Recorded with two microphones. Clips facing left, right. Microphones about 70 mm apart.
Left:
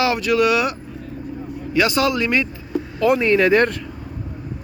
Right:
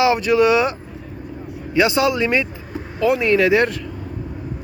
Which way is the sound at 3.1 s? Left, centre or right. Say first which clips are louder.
Even; centre.